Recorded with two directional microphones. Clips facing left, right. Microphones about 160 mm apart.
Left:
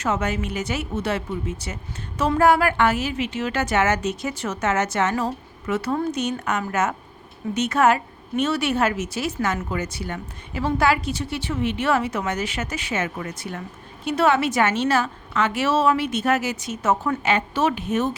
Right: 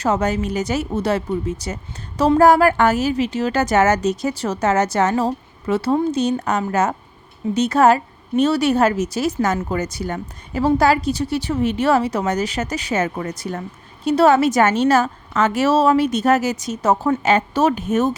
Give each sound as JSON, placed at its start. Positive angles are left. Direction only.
{"t": 0.0, "sound": "speech", "side_deg": -35}